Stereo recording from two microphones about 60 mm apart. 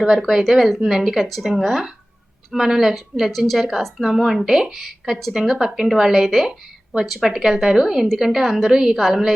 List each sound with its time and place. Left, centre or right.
0.0 s a woman's voice: centre